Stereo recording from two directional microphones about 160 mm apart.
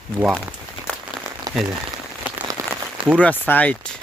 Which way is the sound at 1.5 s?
25° right (ahead or behind).